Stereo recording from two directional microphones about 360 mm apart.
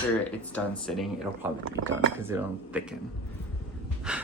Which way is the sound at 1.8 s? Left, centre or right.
Right.